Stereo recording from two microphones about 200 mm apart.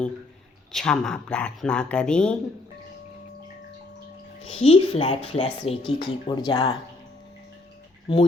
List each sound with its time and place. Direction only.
0.7 s speech: centre (ahead or behind)
4.4 s speech: 30° left (ahead or behind)